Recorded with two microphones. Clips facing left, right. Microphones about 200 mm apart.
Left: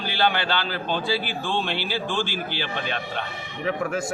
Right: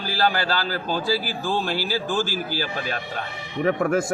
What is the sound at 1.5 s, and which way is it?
Speech, 5° right (ahead or behind).